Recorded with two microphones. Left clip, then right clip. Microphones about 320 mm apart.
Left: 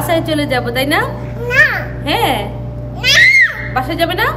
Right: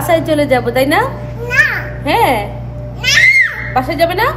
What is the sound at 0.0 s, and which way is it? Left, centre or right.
A woman's voice, centre.